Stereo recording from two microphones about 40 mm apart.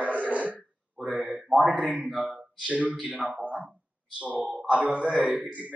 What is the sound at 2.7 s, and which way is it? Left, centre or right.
Speech, right.